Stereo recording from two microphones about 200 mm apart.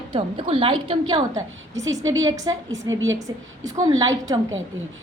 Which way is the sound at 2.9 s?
70° right (ahead or behind).